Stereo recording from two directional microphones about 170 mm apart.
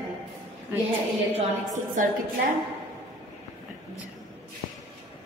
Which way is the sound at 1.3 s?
45° right (ahead or behind).